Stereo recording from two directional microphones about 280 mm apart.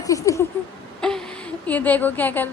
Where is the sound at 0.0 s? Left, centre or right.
Centre.